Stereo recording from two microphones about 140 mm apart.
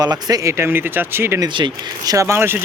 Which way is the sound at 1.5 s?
35° right (ahead or behind).